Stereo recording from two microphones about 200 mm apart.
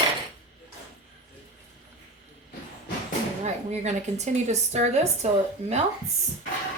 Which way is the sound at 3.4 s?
35° right (ahead or behind).